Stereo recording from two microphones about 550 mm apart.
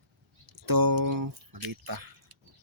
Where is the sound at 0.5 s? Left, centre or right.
Right.